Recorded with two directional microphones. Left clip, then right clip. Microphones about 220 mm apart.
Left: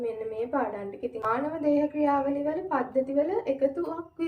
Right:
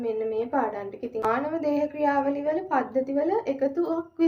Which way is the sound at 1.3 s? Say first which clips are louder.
Right 1 dB; 40° right (ahead or behind).